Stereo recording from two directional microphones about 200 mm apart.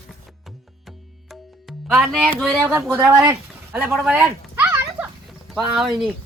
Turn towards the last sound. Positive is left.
turn(degrees=0)  # may be behind; listen again after turning